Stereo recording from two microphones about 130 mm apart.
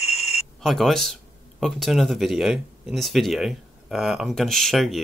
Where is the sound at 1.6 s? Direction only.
Centre (ahead or behind).